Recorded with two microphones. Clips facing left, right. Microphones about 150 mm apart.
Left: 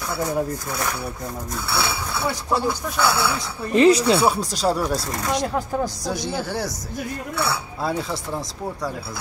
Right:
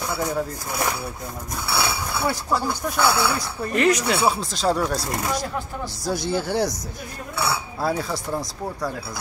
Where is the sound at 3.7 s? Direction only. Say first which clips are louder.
Left 5 dB; 30° left (ahead or behind).